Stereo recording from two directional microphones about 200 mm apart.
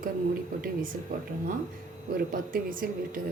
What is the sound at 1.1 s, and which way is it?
A woman's voice, 45° right (ahead or behind).